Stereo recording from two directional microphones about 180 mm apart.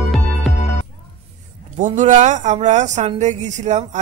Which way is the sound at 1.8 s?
45° right (ahead or behind).